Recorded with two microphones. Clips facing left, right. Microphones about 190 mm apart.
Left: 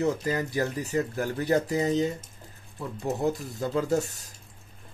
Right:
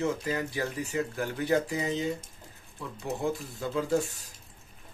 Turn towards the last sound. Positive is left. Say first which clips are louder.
# left 2 dB
turn(degrees=45)  # may be behind; listen again after turning